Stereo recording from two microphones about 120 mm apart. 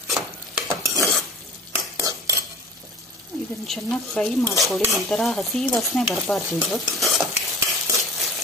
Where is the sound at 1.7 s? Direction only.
25° right (ahead or behind).